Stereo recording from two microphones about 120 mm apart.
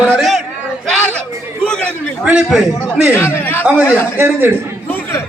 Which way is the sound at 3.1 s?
20° left (ahead or behind).